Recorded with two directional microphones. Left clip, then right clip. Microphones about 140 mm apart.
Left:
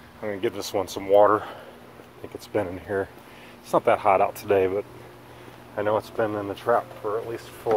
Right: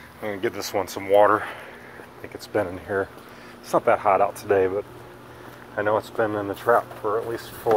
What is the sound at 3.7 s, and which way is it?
Speech, 40° left (ahead or behind).